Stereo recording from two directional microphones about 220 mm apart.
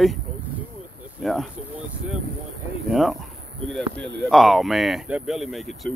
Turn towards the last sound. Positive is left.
turn(degrees=0)  # may be behind; listen again after turning